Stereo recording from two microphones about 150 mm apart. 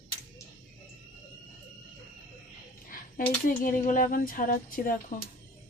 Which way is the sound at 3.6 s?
65° left (ahead or behind).